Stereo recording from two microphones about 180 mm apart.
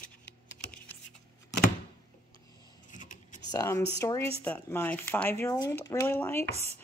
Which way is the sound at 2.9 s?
45° left (ahead or behind).